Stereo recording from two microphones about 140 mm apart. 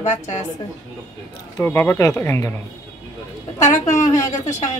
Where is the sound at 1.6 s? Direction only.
15° left (ahead or behind).